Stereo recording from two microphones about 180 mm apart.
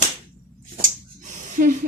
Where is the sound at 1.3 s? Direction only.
45° right (ahead or behind).